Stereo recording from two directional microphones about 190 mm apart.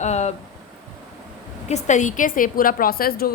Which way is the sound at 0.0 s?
35° left (ahead or behind).